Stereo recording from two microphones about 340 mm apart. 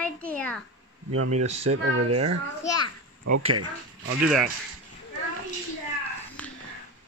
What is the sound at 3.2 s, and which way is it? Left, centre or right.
Speech, right.